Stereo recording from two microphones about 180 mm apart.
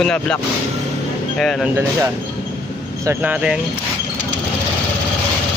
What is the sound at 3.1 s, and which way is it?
Speech, 10° right (ahead or behind).